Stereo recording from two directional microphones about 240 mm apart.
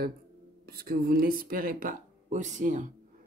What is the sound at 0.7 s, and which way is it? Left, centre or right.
Speech, right.